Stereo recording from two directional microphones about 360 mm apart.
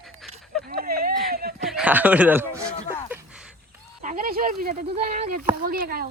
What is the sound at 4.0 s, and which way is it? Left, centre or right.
Speech, right.